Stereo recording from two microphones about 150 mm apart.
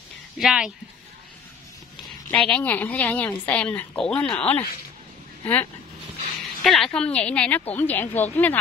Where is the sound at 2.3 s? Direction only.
10° left (ahead or behind).